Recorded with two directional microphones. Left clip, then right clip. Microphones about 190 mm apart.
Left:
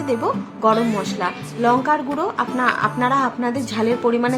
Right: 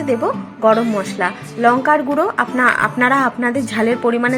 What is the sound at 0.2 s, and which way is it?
Speech, 15° right (ahead or behind).